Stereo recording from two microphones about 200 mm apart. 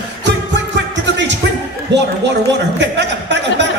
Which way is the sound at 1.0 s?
65° right (ahead or behind).